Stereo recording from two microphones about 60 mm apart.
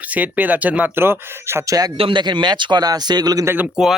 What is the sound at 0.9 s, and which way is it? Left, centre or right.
Speech, right.